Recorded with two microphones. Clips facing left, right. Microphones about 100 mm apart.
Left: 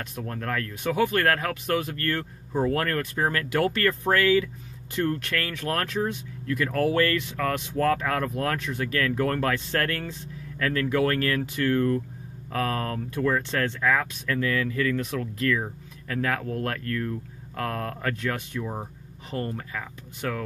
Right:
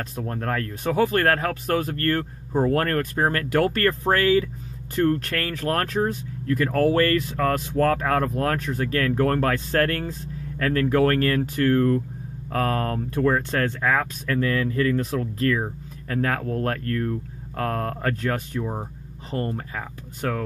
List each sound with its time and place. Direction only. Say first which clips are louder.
0.0 s speech: right 4 dB; 35° right (ahead or behind)